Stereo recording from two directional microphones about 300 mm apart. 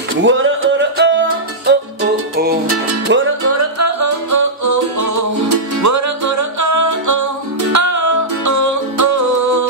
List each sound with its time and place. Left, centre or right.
0.2 s music: right
2.7 s music: right